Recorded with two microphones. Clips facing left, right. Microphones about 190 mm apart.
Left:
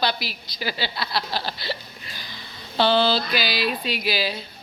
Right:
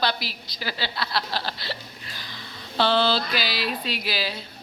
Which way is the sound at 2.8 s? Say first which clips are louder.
Left 2 dB; 5° left (ahead or behind).